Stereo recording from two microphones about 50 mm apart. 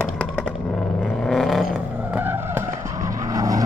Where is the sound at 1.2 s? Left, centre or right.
Centre.